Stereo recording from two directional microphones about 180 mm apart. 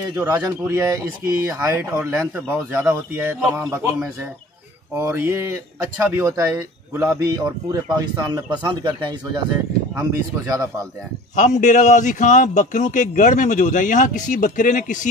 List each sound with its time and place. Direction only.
0.1 s speech: 15° right (ahead or behind)
9.9 s speech: 20° right (ahead or behind)
11.3 s a man's voice: 45° left (ahead or behind)